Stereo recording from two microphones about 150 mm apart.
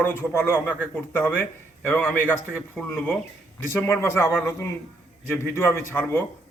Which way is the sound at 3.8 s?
15° left (ahead or behind).